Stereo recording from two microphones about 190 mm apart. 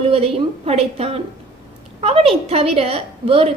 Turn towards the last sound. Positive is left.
turn(degrees=-30)  # may be behind; listen again after turning